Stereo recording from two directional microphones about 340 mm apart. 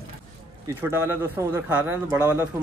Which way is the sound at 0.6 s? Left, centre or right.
Centre.